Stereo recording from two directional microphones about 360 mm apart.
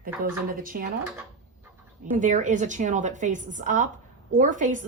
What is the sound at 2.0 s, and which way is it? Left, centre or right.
A woman's voice, right.